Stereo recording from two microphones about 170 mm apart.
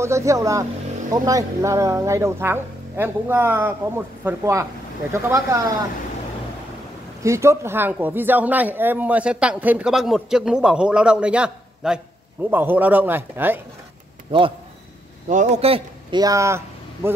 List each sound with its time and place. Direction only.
0.0 s speech: 15° right (ahead or behind)
7.2 s speech: 15° right (ahead or behind)
15.2 s speech: 45° right (ahead or behind)
16.2 s speech: 20° right (ahead or behind)